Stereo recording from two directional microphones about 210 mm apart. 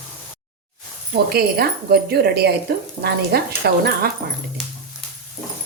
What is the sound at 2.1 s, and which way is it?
A woman's voice, 50° right (ahead or behind).